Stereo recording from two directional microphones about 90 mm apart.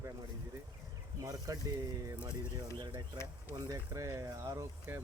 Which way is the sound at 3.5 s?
45° right (ahead or behind).